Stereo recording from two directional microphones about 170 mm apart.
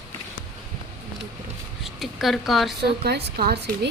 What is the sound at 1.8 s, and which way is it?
Speech, centre (ahead or behind).